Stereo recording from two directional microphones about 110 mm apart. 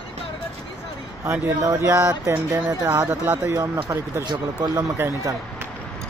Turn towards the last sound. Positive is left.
turn(degrees=-20)  # may be behind; listen again after turning